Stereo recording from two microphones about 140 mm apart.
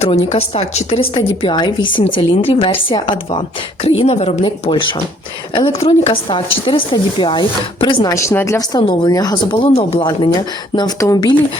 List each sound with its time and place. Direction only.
0.0 s speech: 50° left (ahead or behind)
3.8 s speech: 45° left (ahead or behind)
8.1 s speech: 20° left (ahead or behind); by 10.1 s 40° left (ahead or behind)
10.8 s speech: 25° left (ahead or behind)